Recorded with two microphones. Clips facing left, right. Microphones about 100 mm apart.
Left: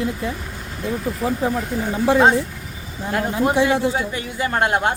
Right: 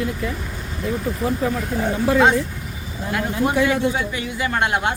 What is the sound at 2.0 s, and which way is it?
Speech, 25° left (ahead or behind).